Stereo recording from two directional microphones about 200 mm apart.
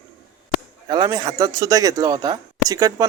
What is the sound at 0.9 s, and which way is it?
Speech, 20° right (ahead or behind).